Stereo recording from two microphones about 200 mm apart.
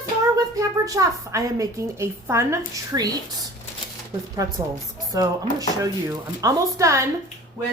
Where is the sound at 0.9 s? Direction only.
15° right (ahead or behind).